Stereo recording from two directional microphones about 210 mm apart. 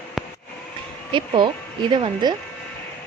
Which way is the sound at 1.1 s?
25° right (ahead or behind).